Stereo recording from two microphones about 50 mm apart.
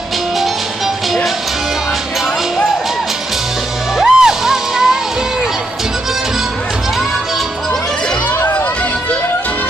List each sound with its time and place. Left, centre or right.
4.0 s music: centre
8.4 s music: left